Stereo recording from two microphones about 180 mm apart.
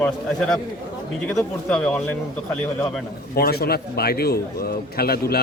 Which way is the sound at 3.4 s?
60° left (ahead or behind).